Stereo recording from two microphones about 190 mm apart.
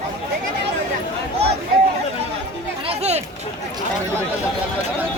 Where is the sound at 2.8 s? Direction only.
30° right (ahead or behind).